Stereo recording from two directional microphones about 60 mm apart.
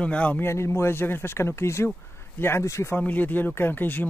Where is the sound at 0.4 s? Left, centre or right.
Left.